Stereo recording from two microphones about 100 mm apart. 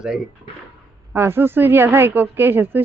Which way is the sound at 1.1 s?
25° right (ahead or behind).